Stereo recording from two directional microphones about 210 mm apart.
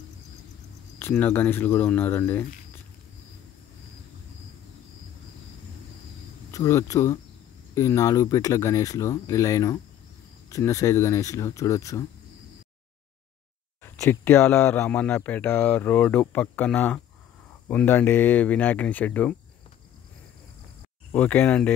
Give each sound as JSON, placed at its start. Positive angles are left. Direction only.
{"t": 0.9, "sound": "speech", "side_deg": 10}
{"t": 6.5, "sound": "speech", "side_deg": 15}
{"t": 13.8, "sound": "speech", "side_deg": 10}
{"t": 21.1, "sound": "speech", "side_deg": 5}